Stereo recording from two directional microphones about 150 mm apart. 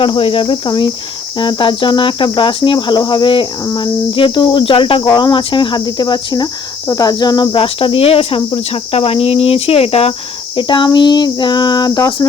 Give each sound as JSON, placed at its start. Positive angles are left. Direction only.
{"t": 0.0, "sound": "speech", "side_deg": 35}
{"t": 10.6, "sound": "speech", "side_deg": 30}